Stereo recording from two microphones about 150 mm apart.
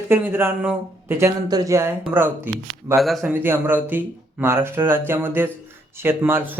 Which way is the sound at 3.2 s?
15° right (ahead or behind).